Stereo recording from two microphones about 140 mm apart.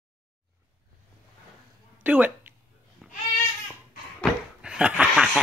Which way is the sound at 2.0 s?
10° right (ahead or behind).